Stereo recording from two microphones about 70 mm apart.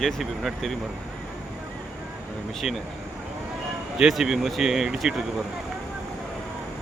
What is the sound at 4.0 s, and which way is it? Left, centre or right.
Speech, centre.